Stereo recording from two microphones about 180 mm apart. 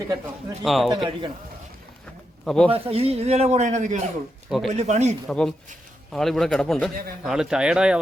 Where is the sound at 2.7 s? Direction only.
30° right (ahead or behind).